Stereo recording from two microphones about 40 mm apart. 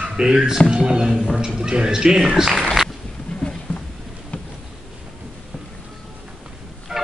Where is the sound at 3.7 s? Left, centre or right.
Left.